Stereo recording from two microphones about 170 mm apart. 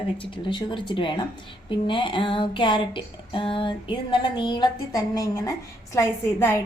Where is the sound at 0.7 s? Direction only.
30° left (ahead or behind).